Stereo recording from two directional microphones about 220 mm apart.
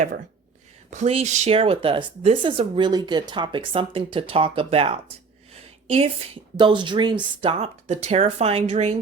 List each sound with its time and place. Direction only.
0.9 s a woman's voice: 30° right (ahead or behind)